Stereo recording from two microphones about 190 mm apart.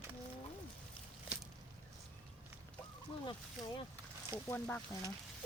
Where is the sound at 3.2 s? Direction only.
25° left (ahead or behind).